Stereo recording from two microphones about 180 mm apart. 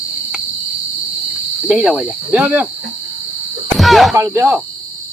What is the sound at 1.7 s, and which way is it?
Speech, 5° right (ahead or behind).